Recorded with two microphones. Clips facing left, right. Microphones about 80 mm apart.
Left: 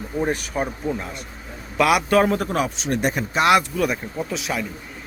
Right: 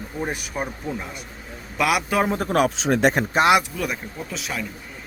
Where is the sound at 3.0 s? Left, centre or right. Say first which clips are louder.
Right 5 dB; right.